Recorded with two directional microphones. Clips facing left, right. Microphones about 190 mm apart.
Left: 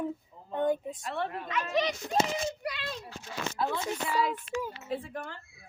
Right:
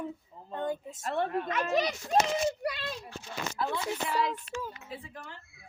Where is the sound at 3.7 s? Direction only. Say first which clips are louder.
Even; 10° left (ahead or behind).